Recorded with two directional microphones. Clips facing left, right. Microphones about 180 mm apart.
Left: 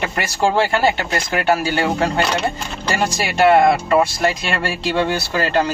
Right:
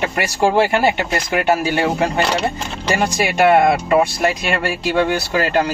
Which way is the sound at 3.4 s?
10° right (ahead or behind).